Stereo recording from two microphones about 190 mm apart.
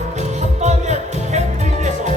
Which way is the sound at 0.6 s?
35° right (ahead or behind).